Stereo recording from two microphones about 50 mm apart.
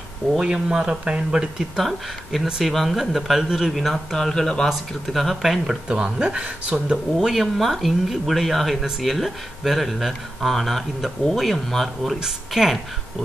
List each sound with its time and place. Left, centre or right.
0.4 s speech: centre
1.8 s speech: centre
4.6 s speech: centre
5.9 s speech: centre
7.2 s speech: centre